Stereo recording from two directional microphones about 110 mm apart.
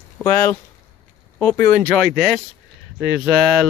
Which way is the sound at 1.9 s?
5° left (ahead or behind).